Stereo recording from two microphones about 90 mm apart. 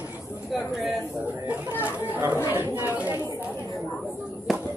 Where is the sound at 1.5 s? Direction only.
20° right (ahead or behind).